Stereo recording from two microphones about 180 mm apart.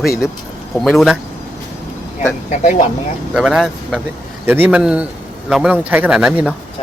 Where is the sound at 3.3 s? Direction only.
5° right (ahead or behind).